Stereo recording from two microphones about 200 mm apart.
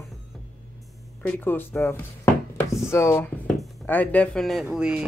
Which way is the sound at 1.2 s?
10° left (ahead or behind).